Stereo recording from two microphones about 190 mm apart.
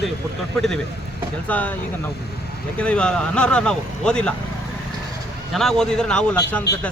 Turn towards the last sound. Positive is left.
turn(degrees=5)  # may be behind; listen again after turning